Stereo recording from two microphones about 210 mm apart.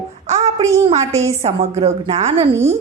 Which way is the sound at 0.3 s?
35° right (ahead or behind).